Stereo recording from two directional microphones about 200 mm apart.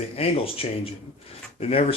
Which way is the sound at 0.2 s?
30° left (ahead or behind).